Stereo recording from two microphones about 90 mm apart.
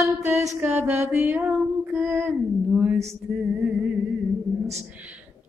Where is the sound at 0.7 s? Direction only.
25° right (ahead or behind).